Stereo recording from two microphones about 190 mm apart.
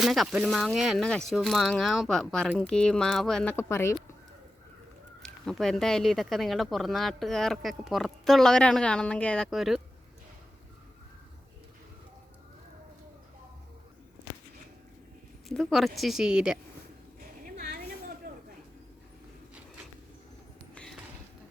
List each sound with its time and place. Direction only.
0.0 s speech: centre (ahead or behind)
5.2 s speech: 5° left (ahead or behind)
15.4 s speech: centre (ahead or behind)
17.4 s a sound: 50° right (ahead or behind)